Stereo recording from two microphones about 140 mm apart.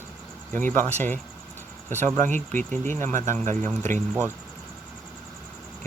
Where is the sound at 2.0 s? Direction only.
60° right (ahead or behind).